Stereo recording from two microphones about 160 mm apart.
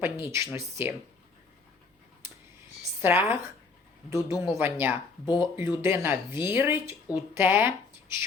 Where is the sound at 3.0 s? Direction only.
15° right (ahead or behind).